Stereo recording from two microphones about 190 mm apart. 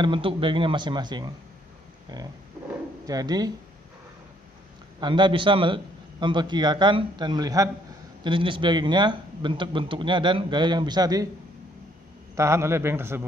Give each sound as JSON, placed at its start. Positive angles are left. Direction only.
{"t": 0.0, "sound": "speech", "side_deg": -25}
{"t": 3.1, "sound": "speech", "side_deg": -20}
{"t": 5.0, "sound": "speech", "side_deg": -25}
{"t": 12.4, "sound": "a man's voice", "side_deg": -15}